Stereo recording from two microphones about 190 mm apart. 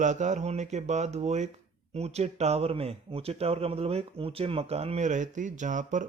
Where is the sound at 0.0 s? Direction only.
40° right (ahead or behind).